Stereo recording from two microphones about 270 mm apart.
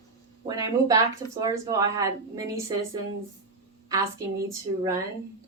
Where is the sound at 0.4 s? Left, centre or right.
Centre.